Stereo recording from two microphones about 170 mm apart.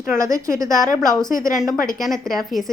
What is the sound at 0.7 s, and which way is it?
Speech, 50° left (ahead or behind).